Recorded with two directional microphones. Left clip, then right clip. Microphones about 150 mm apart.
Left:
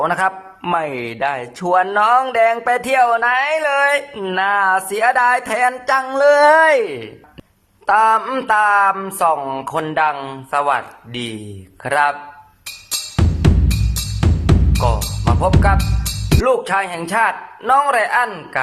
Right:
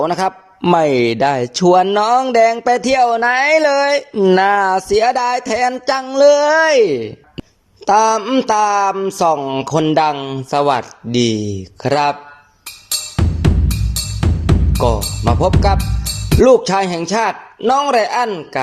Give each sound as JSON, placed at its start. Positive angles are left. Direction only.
{"t": 0.0, "sound": "speech", "side_deg": -25}
{"t": 1.6, "sound": "speech", "side_deg": -20}
{"t": 6.4, "sound": "speech", "side_deg": 0}
{"t": 6.8, "sound": "speech", "side_deg": -25}
{"t": 10.5, "sound": "speech", "side_deg": -30}
{"t": 12.9, "sound": "music", "side_deg": 0}
{"t": 16.4, "sound": "speech", "side_deg": -30}